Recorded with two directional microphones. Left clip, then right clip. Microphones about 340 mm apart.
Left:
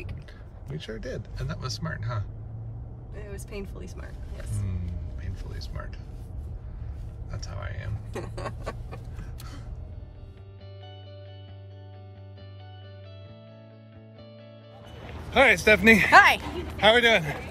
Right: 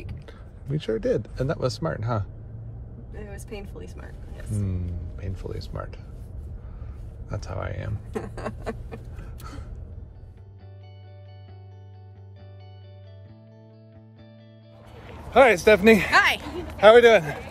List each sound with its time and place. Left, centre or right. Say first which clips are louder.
0.3 s speech: right 7 dB; centre
3.1 s speech: right 2 dB; centre
4.6 s speech: right 5 dB; centre
7.2 s speech: right 7 dB; centre
8.1 s a sound: right 3 dB; centre
15.3 s speech: right 3 dB; centre
16.2 s a sound: left 3 dB; centre
16.8 s speech: right 6 dB; centre